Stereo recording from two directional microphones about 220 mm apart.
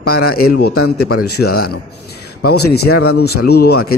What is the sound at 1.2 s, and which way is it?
A man's voice, 45° left (ahead or behind).